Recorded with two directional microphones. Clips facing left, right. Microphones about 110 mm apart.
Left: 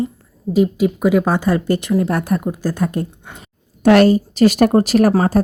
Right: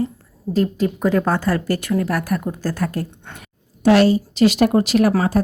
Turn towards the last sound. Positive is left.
turn(degrees=35)  # may be behind; listen again after turning